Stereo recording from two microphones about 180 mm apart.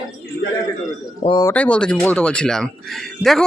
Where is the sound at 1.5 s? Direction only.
5° left (ahead or behind).